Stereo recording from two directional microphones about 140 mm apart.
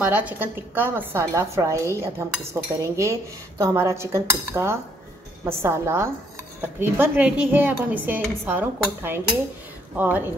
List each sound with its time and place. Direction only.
0.0 s a woman's voice: 10° right (ahead or behind)